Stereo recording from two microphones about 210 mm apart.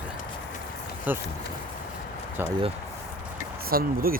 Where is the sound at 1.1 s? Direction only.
10° right (ahead or behind).